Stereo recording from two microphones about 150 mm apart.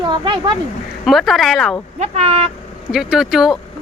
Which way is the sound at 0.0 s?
30° right (ahead or behind).